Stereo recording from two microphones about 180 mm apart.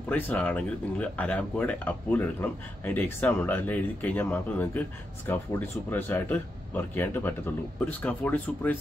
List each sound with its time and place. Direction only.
0.1 s speech: 10° left (ahead or behind)